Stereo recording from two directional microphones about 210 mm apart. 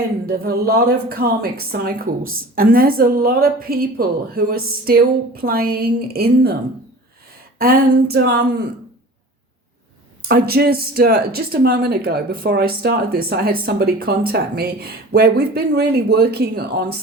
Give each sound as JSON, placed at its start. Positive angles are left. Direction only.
{"t": 0.3, "sound": "speech", "side_deg": -45}
{"t": 7.6, "sound": "speech", "side_deg": -50}
{"t": 10.2, "sound": "speech", "side_deg": -50}